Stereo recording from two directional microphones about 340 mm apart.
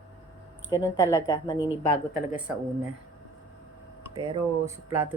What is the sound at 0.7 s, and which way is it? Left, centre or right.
Speech, centre.